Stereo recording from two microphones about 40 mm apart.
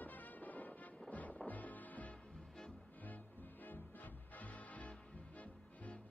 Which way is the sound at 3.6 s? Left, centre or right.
Left.